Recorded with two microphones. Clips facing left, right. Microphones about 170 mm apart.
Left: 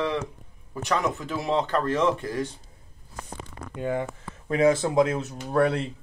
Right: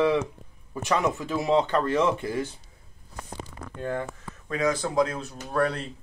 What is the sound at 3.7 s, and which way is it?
Speech, 10° left (ahead or behind).